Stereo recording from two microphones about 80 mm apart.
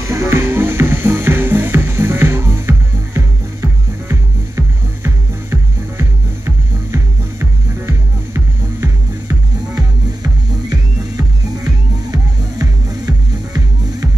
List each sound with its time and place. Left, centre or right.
0.0 s music: right